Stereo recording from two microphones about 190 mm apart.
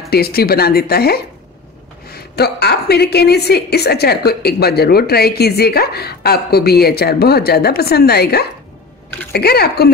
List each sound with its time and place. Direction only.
0.1 s a woman's voice: 55° left (ahead or behind)
2.3 s a woman's voice: 60° left (ahead or behind)